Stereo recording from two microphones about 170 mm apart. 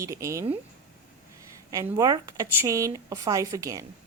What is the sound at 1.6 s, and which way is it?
Speech, 20° right (ahead or behind).